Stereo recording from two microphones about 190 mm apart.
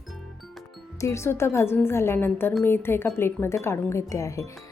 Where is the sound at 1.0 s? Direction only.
15° left (ahead or behind).